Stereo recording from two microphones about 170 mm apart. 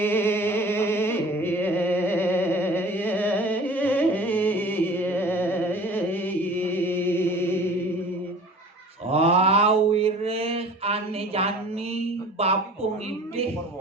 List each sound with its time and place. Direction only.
0.0 s music: 15° left (ahead or behind)
9.0 s mantra: 35° right (ahead or behind)
12.4 s a sound: 35° right (ahead or behind)